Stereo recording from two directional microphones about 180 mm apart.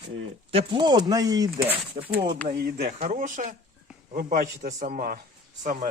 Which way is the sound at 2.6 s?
60° right (ahead or behind).